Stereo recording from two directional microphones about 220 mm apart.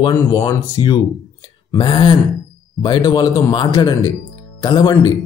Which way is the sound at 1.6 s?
20° left (ahead or behind).